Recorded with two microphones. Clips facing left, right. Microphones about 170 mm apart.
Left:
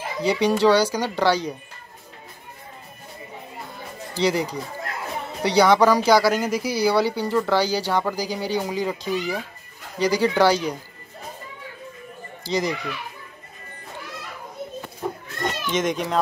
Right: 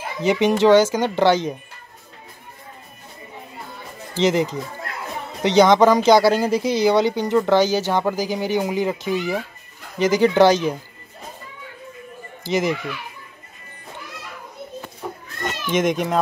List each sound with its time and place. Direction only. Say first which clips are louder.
0.2 s speech: right 2 dB; 20° right (ahead or behind)
4.2 s speech: right 3 dB; 20° right (ahead or behind)
12.4 s speech: right 3 dB; 20° right (ahead or behind)
15.7 s speech: right 5 dB; 10° right (ahead or behind)